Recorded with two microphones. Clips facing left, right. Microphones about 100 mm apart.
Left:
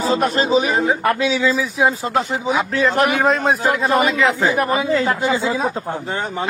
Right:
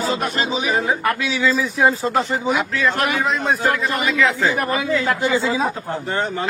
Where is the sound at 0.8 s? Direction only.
25° left (ahead or behind).